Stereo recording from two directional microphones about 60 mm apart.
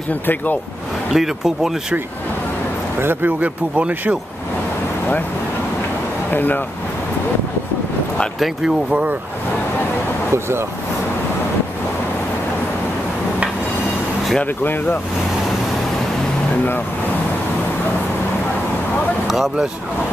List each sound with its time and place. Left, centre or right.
1.1 s speech: centre
3.0 s speech: right
6.3 s speech: left
14.6 s speech: left
19.2 s vehicle: centre